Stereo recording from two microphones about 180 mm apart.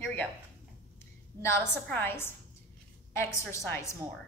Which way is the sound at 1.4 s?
10° left (ahead or behind).